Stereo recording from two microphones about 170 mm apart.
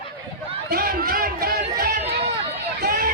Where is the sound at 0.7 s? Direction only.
60° right (ahead or behind).